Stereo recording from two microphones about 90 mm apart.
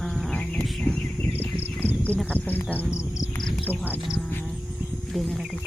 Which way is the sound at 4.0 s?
Centre (ahead or behind).